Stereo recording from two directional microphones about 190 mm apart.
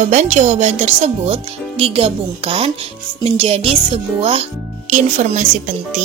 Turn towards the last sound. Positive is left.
turn(degrees=-40)  # may be behind; listen again after turning